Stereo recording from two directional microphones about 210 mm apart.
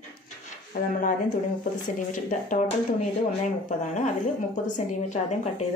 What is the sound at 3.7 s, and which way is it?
A woman's voice, 35° left (ahead or behind).